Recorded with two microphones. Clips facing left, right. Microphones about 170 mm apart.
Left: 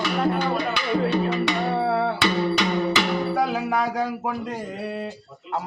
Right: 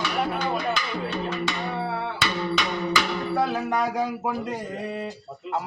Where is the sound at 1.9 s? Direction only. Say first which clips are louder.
Left 8 dB; 65° left (ahead or behind).